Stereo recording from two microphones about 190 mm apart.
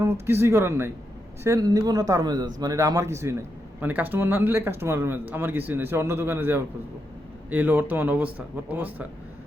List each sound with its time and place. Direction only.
0.0 s speech: 15° right (ahead or behind)